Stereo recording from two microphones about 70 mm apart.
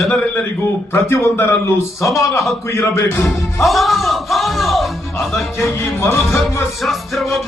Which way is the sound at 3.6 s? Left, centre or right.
Centre.